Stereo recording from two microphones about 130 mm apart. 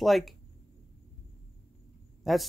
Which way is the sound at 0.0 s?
Centre (ahead or behind).